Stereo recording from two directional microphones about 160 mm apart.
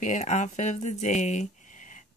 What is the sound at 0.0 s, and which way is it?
Speech, 50° left (ahead or behind).